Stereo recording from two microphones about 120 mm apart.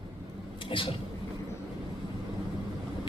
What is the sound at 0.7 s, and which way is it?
Speech, 45° left (ahead or behind).